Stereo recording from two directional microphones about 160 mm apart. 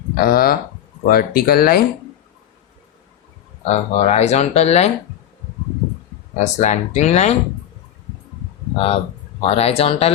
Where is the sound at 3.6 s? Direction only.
45° left (ahead or behind).